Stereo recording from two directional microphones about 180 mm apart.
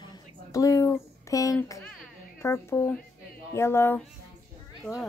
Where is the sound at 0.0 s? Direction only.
20° left (ahead or behind).